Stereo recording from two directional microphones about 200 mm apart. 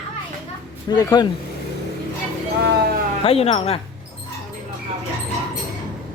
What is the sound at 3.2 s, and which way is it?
Speech, 30° left (ahead or behind).